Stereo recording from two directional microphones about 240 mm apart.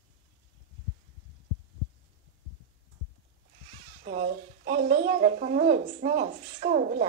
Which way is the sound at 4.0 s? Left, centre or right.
Right.